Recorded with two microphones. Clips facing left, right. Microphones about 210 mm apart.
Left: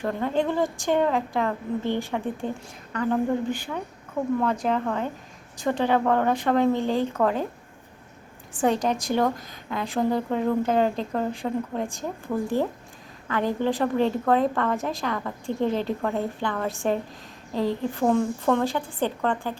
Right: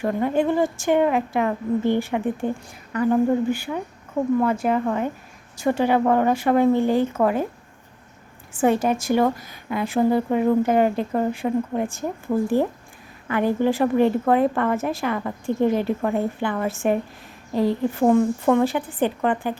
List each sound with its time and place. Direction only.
0.0 s a woman's voice: 10° right (ahead or behind)
8.6 s a woman's voice: 5° right (ahead or behind)